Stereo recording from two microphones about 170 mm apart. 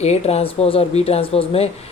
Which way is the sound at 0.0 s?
40° left (ahead or behind).